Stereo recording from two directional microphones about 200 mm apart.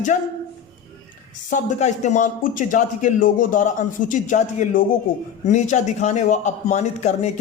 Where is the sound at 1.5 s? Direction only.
35° left (ahead or behind).